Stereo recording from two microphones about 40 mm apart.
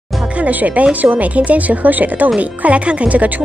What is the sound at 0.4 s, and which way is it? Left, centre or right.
A woman's voice, right.